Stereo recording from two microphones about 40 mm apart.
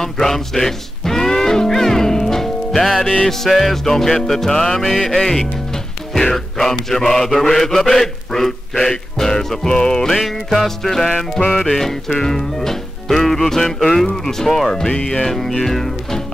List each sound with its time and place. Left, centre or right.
0.0 s music: centre
3.3 s mantra: centre
4.6 s music: centre
5.0 s mantra: centre
10.0 s music: centre
10.5 s mantra: centre